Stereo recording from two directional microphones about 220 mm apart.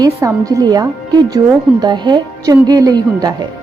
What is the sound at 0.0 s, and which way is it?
A woman's voice, 15° right (ahead or behind).